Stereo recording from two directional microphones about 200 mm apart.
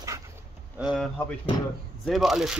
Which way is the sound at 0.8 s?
Centre (ahead or behind).